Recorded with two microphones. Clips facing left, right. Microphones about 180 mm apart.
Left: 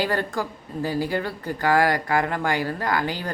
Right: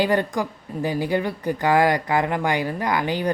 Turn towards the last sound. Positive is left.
turn(degrees=-20)  # may be behind; listen again after turning